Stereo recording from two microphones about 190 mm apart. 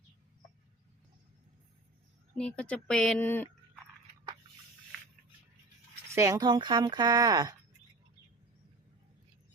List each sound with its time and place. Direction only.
2.3 s speech: 5° left (ahead or behind)
6.1 s speech: 15° right (ahead or behind)